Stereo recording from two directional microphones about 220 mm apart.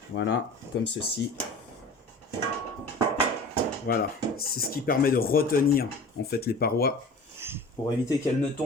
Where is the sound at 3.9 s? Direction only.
45° left (ahead or behind).